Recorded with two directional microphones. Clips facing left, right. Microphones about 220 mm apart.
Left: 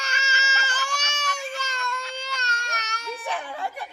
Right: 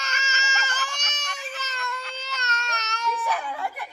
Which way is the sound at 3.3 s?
30° left (ahead or behind).